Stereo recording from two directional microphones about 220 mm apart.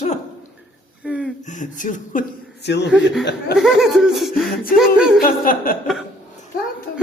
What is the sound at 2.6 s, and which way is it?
Speech, 50° left (ahead or behind).